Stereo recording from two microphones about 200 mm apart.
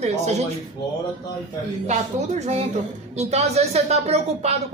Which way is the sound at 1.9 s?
35° right (ahead or behind).